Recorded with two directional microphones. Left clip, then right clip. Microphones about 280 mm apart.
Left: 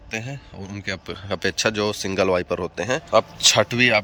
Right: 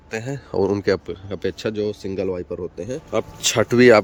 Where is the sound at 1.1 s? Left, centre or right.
Centre.